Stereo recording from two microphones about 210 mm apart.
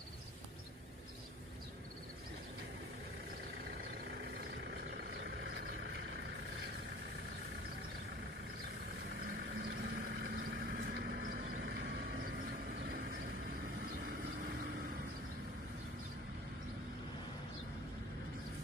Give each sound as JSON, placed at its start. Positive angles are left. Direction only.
{"t": 4.6, "sound": "vehicle", "side_deg": -50}
{"t": 9.2, "sound": "vehicle", "side_deg": -50}